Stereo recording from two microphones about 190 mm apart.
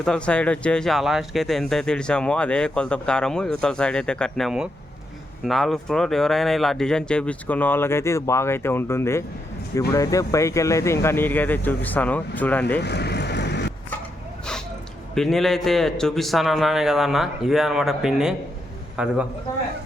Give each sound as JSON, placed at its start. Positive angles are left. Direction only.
{"t": 0.0, "sound": "speech", "side_deg": 5}
{"t": 12.8, "sound": "vehicle", "side_deg": 60}
{"t": 15.1, "sound": "speech", "side_deg": 0}